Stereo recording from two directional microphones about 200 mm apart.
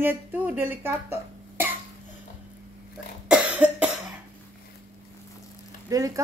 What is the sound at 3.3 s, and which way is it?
Cough, 5° right (ahead or behind).